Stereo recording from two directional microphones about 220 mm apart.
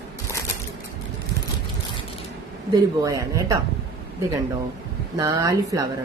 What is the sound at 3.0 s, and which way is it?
Speech, 15° right (ahead or behind).